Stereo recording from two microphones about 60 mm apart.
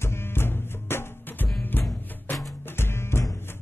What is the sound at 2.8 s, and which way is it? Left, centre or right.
Music, left.